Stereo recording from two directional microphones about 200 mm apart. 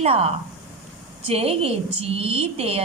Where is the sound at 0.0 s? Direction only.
30° right (ahead or behind).